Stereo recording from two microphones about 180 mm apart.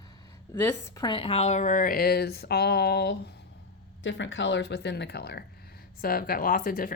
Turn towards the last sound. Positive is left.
turn(degrees=55)  # may be behind; listen again after turning